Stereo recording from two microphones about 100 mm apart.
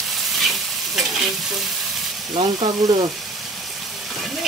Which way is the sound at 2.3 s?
40° right (ahead or behind).